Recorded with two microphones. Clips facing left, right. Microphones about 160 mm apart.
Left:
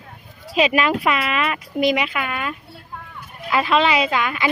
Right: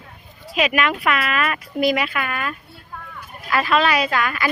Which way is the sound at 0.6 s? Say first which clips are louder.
Left 2 dB; 30° left (ahead or behind).